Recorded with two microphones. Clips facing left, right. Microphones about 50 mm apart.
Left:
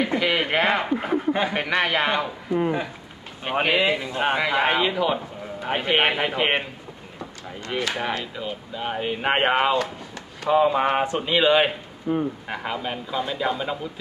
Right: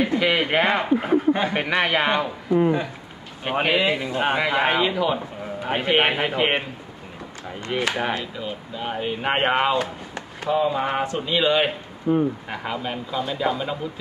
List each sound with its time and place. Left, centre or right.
0.2 s speech: centre
7.9 s speech: centre
8.2 s speech: centre
9.7 s speech: centre
10.5 s speech: left
12.0 s speech: centre